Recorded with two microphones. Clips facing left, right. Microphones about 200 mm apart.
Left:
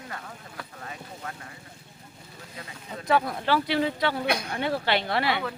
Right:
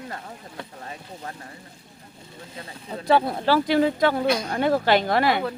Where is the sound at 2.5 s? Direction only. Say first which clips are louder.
Right 4 dB; 30° right (ahead or behind).